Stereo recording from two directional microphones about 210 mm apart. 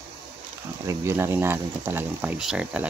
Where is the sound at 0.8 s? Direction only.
15° right (ahead or behind).